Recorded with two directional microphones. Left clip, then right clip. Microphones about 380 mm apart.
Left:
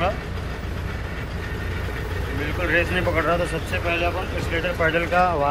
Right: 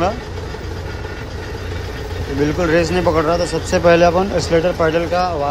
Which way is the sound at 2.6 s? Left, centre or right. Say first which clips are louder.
Right 5 dB; centre.